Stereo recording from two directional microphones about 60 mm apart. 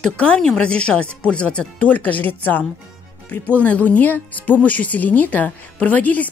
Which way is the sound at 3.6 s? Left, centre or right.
Left.